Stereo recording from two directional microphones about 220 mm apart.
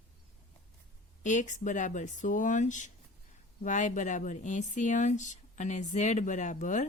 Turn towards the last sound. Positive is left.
turn(degrees=35)  # may be behind; listen again after turning